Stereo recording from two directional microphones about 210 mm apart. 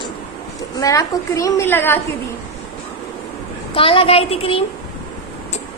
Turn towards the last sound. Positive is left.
turn(degrees=25)  # may be behind; listen again after turning